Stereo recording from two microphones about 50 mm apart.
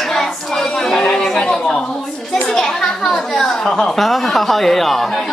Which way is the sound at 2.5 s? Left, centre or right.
Centre.